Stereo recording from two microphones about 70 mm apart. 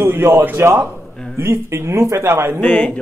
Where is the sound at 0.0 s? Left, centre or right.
Right.